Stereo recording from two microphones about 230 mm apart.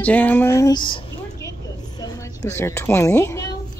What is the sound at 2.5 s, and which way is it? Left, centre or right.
Speech, centre.